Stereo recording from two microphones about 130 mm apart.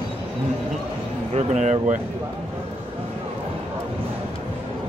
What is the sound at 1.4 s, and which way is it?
Speech, 65° right (ahead or behind).